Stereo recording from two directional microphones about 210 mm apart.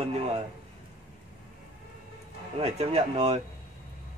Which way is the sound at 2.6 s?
30° right (ahead or behind).